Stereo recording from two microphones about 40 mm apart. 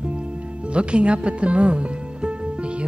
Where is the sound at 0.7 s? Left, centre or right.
Right.